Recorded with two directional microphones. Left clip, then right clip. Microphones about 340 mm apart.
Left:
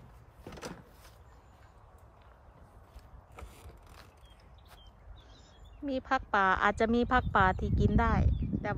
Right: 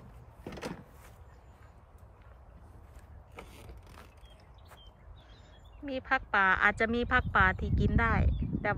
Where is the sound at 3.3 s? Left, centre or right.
Right.